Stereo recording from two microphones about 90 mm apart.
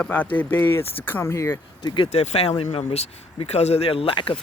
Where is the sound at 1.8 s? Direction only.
50° left (ahead or behind).